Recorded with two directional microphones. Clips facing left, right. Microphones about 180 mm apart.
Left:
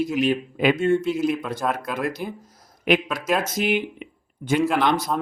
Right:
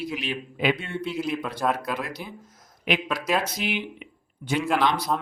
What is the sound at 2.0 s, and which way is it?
Speech, 50° left (ahead or behind).